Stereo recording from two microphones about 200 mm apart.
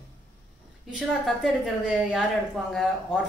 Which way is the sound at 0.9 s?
Centre (ahead or behind).